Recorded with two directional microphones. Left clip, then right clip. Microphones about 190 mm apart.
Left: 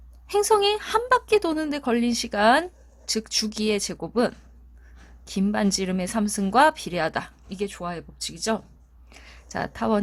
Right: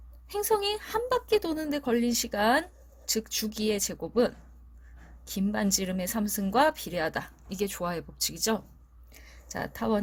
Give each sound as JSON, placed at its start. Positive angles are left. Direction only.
{"t": 0.3, "sound": "speech", "side_deg": 20}
{"t": 7.5, "sound": "speech", "side_deg": 0}
{"t": 9.1, "sound": "speech", "side_deg": 15}